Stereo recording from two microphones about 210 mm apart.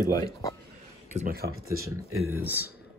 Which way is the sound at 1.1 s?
45° right (ahead or behind).